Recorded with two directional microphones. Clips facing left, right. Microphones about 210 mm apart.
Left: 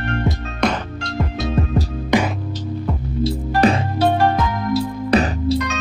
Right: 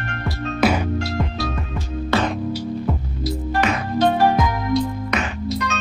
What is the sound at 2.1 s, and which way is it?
Music, 15° left (ahead or behind).